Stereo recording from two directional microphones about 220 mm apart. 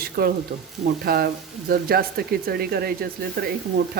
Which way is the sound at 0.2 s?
45° right (ahead or behind).